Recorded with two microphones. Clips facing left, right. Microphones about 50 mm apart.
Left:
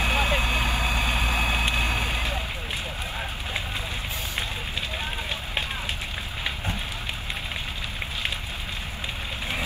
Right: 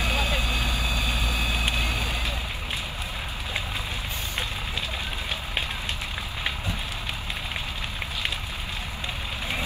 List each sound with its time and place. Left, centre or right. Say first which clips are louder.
0.0 s vehicle: left 3 dB; left